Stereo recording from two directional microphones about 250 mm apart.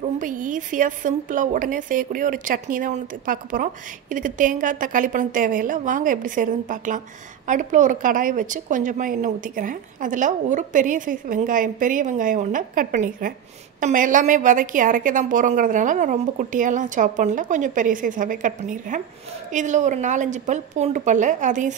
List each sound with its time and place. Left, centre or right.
0.0 s a woman's voice: right